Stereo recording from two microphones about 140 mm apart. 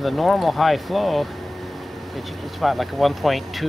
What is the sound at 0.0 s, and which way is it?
Speech, centre (ahead or behind).